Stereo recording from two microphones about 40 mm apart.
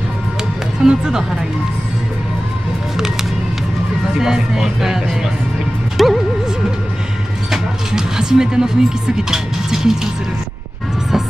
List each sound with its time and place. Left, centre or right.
0.8 s speech: centre
4.2 s speech: centre
6.0 s music: centre
7.5 s speech: centre